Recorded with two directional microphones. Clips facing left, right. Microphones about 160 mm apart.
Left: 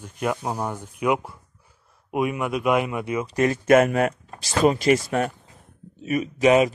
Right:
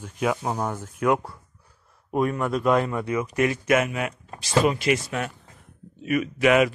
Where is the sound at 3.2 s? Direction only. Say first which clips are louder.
Left 2 dB; 35° left (ahead or behind).